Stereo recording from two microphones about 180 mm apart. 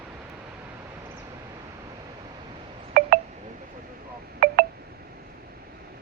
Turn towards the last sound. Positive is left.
turn(degrees=-50)  # may be behind; listen again after turning